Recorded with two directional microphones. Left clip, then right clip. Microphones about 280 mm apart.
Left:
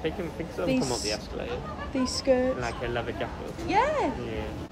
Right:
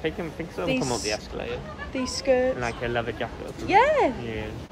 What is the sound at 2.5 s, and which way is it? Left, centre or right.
Speech, right.